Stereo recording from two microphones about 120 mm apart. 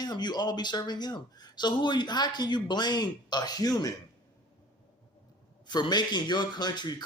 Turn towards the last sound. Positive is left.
turn(degrees=35)  # may be behind; listen again after turning